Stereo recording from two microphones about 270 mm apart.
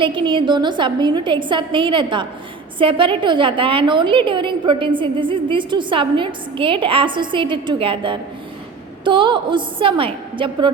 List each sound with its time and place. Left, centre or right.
0.0 s a woman's voice: centre